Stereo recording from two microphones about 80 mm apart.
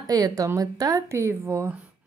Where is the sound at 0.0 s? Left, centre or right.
Right.